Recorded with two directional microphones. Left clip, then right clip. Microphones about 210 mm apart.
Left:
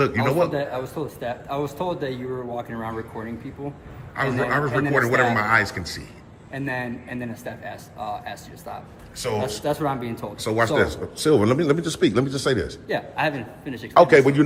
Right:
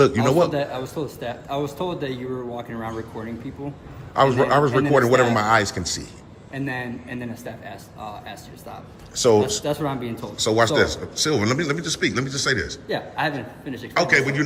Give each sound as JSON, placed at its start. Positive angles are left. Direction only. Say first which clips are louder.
{"t": 0.0, "sound": "a man's voice", "louder": "right 3 dB", "side_deg": -5}
{"t": 13.9, "sound": "a man's voice", "louder": "left 5 dB", "side_deg": 15}